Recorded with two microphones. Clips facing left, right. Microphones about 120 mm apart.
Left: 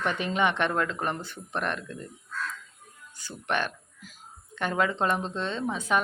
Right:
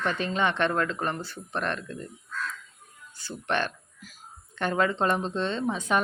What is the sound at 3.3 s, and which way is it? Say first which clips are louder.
A woman's voice: right 1 dB; 10° left (ahead or behind).